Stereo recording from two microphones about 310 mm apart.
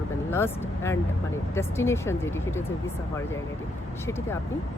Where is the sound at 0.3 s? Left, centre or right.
Centre.